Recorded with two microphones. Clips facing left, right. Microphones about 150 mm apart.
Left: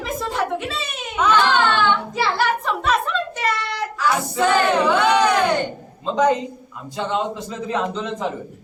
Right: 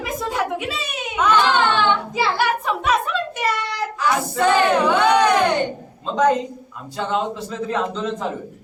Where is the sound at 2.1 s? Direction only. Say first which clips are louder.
Even; 5° right (ahead or behind).